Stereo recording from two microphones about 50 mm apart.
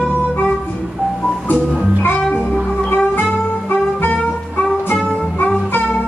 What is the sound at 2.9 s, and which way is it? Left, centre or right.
Music, left.